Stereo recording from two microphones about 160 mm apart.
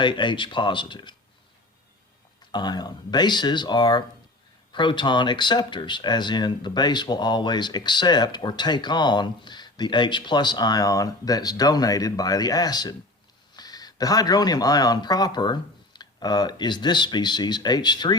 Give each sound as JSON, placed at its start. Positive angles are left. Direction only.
{"t": 0.0, "sound": "speech", "side_deg": 30}
{"t": 2.4, "sound": "speech", "side_deg": 25}